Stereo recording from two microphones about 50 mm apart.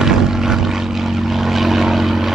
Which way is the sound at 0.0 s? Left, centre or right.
Centre.